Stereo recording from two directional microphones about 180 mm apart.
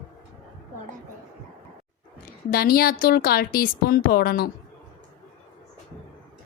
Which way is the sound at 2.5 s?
60° left (ahead or behind).